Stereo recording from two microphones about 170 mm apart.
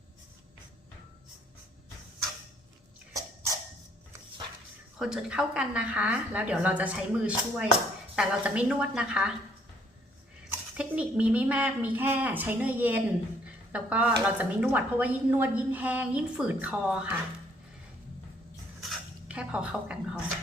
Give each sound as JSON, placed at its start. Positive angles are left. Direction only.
{"t": 3.1, "sound": "a sound", "side_deg": -20}
{"t": 4.9, "sound": "a woman's voice", "side_deg": -5}
{"t": 10.5, "sound": "a woman's voice", "side_deg": -10}
{"t": 18.8, "sound": "dishes", "side_deg": -5}